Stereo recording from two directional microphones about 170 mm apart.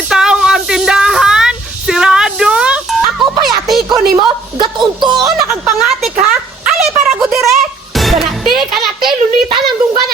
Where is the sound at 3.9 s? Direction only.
25° right (ahead or behind).